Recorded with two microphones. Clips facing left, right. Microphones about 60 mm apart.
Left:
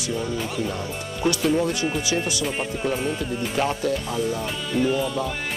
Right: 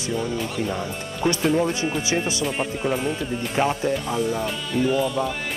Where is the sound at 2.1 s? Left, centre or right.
Right.